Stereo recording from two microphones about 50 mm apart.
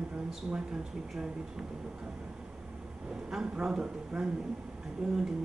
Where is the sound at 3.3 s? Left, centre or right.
Centre.